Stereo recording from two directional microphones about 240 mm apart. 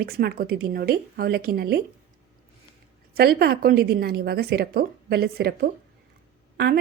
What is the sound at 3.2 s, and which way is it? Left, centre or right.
Speech, right.